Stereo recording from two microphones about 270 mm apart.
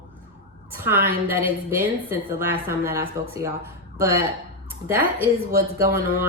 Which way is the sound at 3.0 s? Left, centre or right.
Right.